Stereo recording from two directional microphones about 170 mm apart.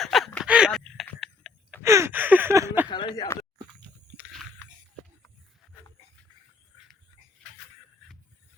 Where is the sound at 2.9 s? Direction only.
25° left (ahead or behind).